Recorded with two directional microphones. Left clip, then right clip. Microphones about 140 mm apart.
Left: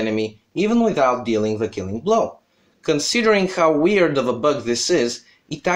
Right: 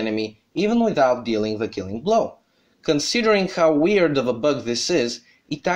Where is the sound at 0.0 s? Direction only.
30° right (ahead or behind).